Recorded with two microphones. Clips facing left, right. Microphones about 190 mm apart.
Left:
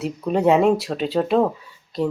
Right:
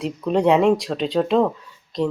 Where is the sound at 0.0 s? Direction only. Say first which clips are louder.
Even; 5° left (ahead or behind).